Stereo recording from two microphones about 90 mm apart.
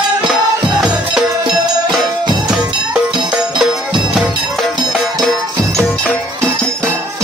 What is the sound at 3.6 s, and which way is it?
Music, centre (ahead or behind).